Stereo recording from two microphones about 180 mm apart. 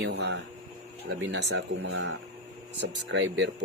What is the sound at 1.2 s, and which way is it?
Speech, 90° right.